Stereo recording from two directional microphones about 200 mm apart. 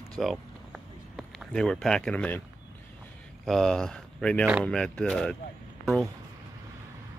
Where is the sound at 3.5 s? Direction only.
Centre (ahead or behind).